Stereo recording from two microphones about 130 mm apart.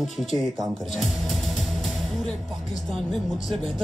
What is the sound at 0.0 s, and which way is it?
Speech, centre (ahead or behind).